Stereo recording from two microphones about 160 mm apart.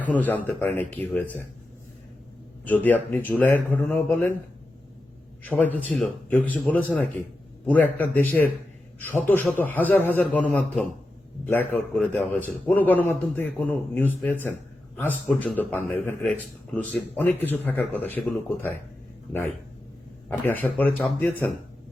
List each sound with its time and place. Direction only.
0.0 s a man's voice: 10° left (ahead or behind)
2.6 s a man's voice: 10° left (ahead or behind)
5.4 s a man's voice: 10° left (ahead or behind)
20.2 s a man's voice: 10° left (ahead or behind)